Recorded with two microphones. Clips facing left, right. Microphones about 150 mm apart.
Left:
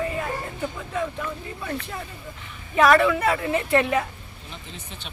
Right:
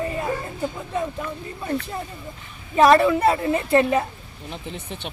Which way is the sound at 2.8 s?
30° right (ahead or behind).